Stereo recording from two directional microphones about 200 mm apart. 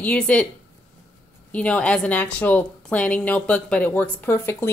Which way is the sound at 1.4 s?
5° left (ahead or behind).